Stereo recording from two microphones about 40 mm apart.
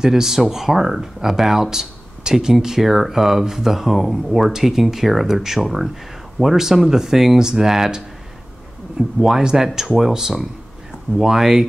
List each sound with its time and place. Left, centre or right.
0.0 s a man's voice: centre